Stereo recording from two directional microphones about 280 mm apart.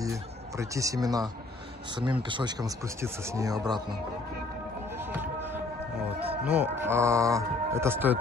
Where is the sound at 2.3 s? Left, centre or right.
Centre.